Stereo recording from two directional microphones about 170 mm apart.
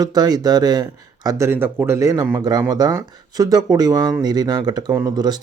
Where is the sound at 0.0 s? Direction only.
25° right (ahead or behind).